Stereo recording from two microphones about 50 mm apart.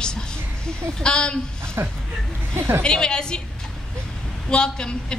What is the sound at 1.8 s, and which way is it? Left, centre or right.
A woman's voice, right.